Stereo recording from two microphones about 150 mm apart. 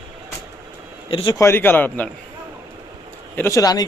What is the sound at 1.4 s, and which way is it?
Speech, 15° left (ahead or behind).